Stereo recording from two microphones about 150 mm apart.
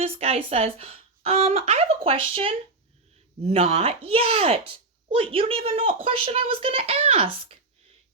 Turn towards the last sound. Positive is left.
turn(degrees=-40)  # may be behind; listen again after turning